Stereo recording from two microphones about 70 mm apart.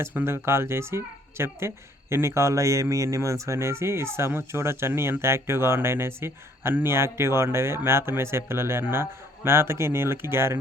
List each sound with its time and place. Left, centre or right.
0.3 s speech: right